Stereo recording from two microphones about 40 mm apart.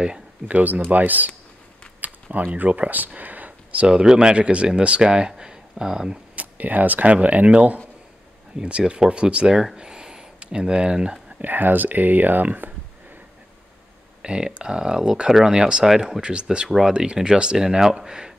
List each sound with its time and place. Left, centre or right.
0.5 s speech: right
2.0 s a sound: right
2.3 s speech: right
3.2 s a sound: right
3.8 s speech: centre
6.3 s speech: right
9.8 s a sound: centre
10.4 s speech: right
11.4 s speech: right
14.2 s speech: right